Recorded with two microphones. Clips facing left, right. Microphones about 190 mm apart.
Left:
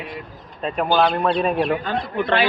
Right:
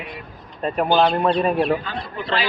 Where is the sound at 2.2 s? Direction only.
60° left (ahead or behind).